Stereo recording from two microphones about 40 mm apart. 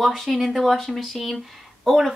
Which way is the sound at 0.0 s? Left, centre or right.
Centre.